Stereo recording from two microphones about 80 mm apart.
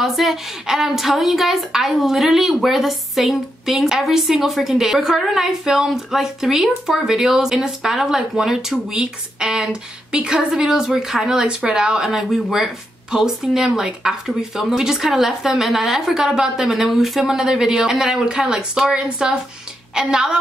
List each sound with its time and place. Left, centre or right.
0.0 s a woman's voice: centre